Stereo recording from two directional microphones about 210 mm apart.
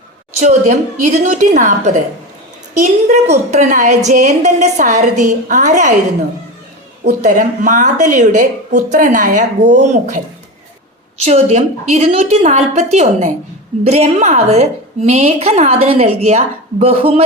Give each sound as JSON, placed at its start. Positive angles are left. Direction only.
{"t": 0.3, "sound": "a woman's voice", "side_deg": -35}
{"t": 7.0, "sound": "a woman's voice", "side_deg": -35}
{"t": 11.3, "sound": "a woman's voice", "side_deg": -30}